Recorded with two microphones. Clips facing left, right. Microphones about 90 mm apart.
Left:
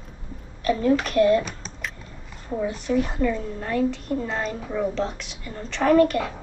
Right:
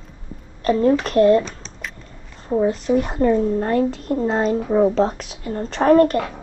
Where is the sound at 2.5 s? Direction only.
35° right (ahead or behind).